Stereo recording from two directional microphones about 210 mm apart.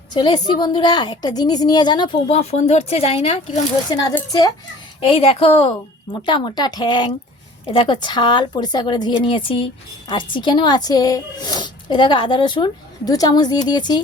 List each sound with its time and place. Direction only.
0.1 s speech: 20° left (ahead or behind)
4.1 s speech: 15° left (ahead or behind)